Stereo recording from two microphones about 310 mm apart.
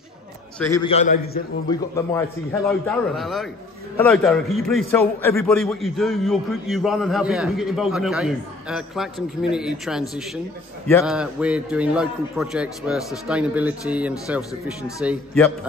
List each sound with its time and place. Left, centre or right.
0.6 s a man's voice: centre
0.9 s a man's voice: left
1.7 s a man's voice: centre
11.1 s a man's voice: centre